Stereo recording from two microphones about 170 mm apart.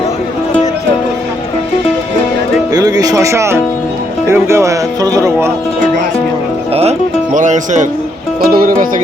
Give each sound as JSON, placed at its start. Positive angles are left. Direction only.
{"t": 2.7, "sound": "speech", "side_deg": -20}
{"t": 7.3, "sound": "speech", "side_deg": -45}
{"t": 8.4, "sound": "speech", "side_deg": -60}